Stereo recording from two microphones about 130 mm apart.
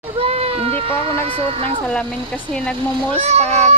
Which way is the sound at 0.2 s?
50° right (ahead or behind).